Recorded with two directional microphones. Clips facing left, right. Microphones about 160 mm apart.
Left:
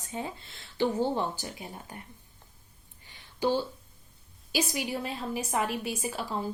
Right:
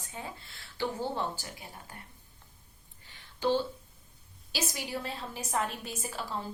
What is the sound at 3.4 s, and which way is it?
A woman's voice, 10° left (ahead or behind).